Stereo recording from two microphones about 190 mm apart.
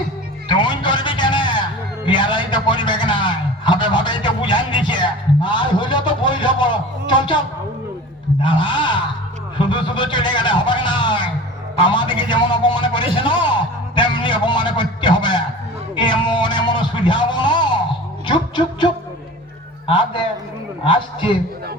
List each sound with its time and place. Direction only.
0.4 s a sound: 25° left (ahead or behind)
8.4 s a man's voice: 25° left (ahead or behind)
13.1 s music: 25° left (ahead or behind)
19.9 s a man's voice: 25° left (ahead or behind)